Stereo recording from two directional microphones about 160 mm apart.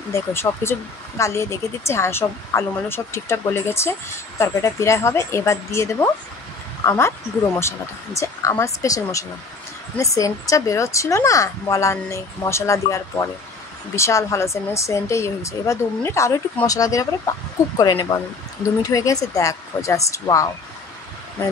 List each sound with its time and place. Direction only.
0.1 s a woman's voice: 15° left (ahead or behind)